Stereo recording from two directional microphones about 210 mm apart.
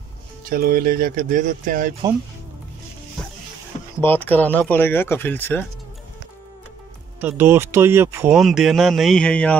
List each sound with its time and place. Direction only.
0.5 s speech: 45° right (ahead or behind)
4.0 s speech: 10° left (ahead or behind)
7.2 s speech: 10° right (ahead or behind); by 9.6 s 5° left (ahead or behind)